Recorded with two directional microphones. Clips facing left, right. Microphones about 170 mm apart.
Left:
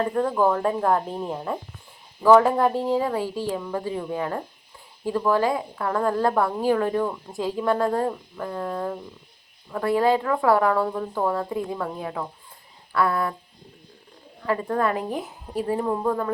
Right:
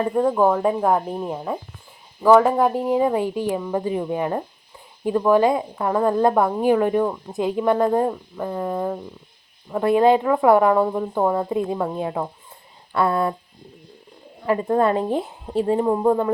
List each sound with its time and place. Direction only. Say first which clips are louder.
0.0 s a woman's voice: right 3 dB; 15° right (ahead or behind)
14.4 s speech: right 5 dB; 20° right (ahead or behind)